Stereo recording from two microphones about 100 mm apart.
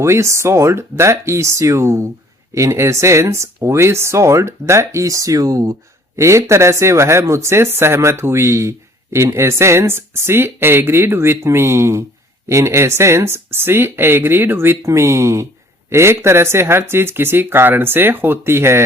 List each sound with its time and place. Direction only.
0.0 s speech: 30° right (ahead or behind)